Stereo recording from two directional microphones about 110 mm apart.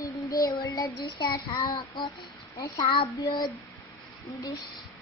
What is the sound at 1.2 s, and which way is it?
Child singing, 45° left (ahead or behind).